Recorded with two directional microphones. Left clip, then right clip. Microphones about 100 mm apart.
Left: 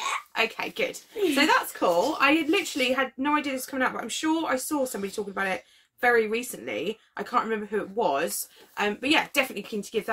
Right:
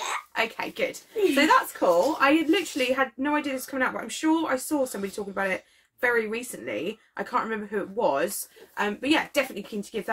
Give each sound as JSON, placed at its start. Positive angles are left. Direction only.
{"t": 0.3, "sound": "a woman's voice", "side_deg": 30}